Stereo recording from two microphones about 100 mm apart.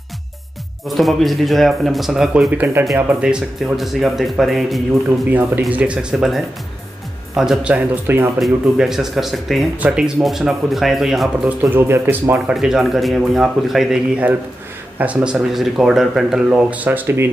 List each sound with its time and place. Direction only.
0.8 s speech: centre (ahead or behind)
2.5 s speech: 20° right (ahead or behind); by 4.8 s centre (ahead or behind)
5.7 s speech: 15° right (ahead or behind)
6.1 s speech: 5° right (ahead or behind); by 8.3 s 20° right (ahead or behind)
8.4 s speech: 5° right (ahead or behind)
9.8 s speech: 10° right (ahead or behind)
11.7 s speech: 20° right (ahead or behind)
12.5 s speech: 5° right (ahead or behind); by 17.3 s 20° right (ahead or behind)